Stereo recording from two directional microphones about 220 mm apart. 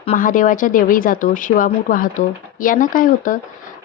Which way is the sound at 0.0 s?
30° left (ahead or behind).